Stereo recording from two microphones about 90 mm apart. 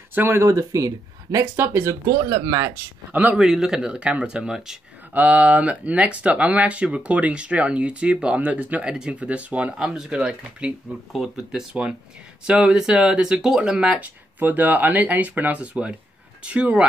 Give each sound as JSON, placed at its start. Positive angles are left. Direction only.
{"t": 0.1, "sound": "speech", "side_deg": -25}
{"t": 0.5, "sound": "speech", "side_deg": -40}
{"t": 1.6, "sound": "speech", "side_deg": -25}
{"t": 2.3, "sound": "speech", "side_deg": -55}
{"t": 3.1, "sound": "speech", "side_deg": -15}
{"t": 3.4, "sound": "speech", "side_deg": -5}